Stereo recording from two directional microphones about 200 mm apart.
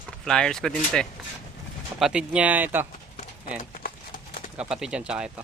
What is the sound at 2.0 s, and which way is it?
Speech, 5° right (ahead or behind).